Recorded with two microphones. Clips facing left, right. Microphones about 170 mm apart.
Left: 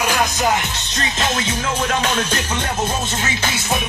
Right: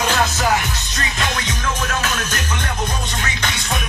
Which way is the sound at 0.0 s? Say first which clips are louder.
Even; 15° left (ahead or behind).